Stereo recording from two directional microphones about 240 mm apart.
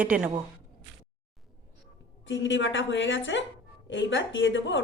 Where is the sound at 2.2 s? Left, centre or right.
Left.